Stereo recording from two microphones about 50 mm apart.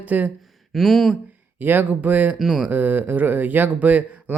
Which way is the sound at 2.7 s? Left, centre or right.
Right.